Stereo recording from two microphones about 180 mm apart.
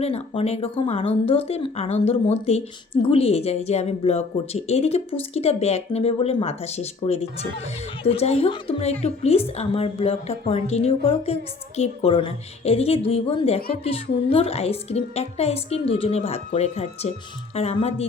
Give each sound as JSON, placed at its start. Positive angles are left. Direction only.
{"t": 0.0, "sound": "speech", "side_deg": 35}